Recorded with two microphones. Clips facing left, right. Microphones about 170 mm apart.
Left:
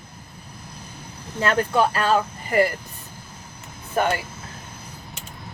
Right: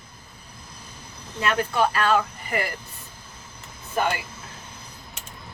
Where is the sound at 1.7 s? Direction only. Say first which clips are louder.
Even; 40° left (ahead or behind).